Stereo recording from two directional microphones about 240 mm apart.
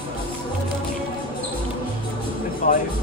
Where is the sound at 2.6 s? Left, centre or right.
Left.